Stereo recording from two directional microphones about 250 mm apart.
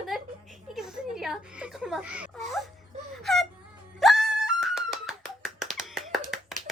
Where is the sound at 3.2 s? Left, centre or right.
Centre.